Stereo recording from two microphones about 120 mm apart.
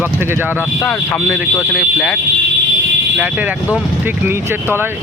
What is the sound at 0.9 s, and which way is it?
Speech, 5° right (ahead or behind).